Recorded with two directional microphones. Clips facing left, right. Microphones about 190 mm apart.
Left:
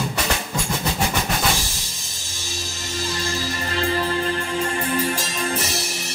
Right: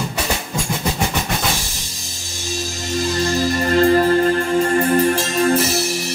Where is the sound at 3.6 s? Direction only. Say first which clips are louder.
Right 10 dB; 45° right (ahead or behind).